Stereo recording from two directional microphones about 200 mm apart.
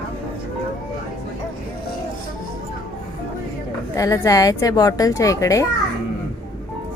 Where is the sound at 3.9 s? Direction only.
15° left (ahead or behind).